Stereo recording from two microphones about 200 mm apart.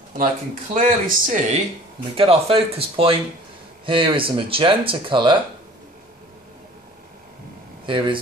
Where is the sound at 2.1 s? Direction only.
30° right (ahead or behind).